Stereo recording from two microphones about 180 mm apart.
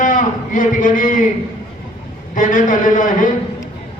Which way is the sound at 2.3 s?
45° left (ahead or behind).